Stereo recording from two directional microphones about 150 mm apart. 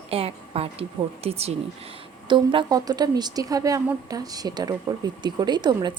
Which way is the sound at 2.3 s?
30° right (ahead or behind).